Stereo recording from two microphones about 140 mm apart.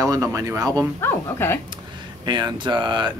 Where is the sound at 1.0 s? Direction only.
15° left (ahead or behind).